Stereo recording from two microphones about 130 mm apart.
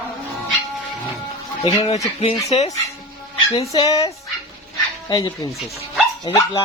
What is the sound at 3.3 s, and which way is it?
Music, 45° left (ahead or behind).